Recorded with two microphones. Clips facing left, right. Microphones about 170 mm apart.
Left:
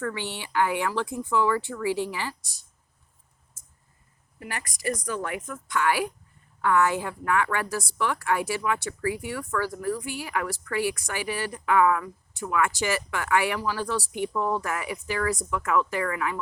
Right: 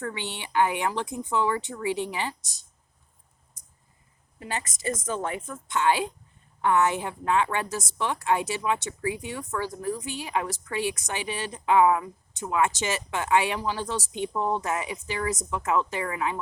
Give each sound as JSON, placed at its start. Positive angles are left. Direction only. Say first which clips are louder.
{"t": 0.0, "sound": "a woman's voice", "louder": "left 2 dB", "side_deg": -20}
{"t": 3.6, "sound": "a sound", "louder": "left 1 dB", "side_deg": -15}
{"t": 4.4, "sound": "a woman's voice", "louder": "right 3 dB", "side_deg": -20}